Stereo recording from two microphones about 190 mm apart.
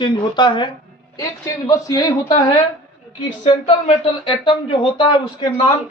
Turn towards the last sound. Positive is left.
turn(degrees=25)  # may be behind; listen again after turning